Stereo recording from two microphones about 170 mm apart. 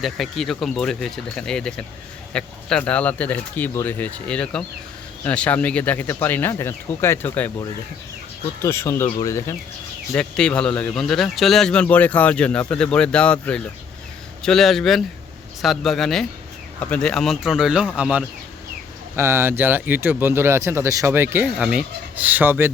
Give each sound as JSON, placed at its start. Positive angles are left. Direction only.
{"t": 0.0, "sound": "a man's voice", "side_deg": 0}
{"t": 8.6, "sound": "speech", "side_deg": 15}
{"t": 10.2, "sound": "a man's voice", "side_deg": 5}